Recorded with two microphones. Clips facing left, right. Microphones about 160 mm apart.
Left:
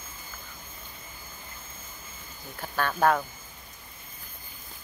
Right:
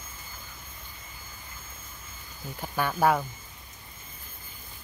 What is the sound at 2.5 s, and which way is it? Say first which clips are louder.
Speech: even; 15° right (ahead or behind).